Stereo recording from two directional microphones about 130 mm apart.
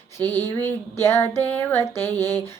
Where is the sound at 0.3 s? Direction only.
20° left (ahead or behind).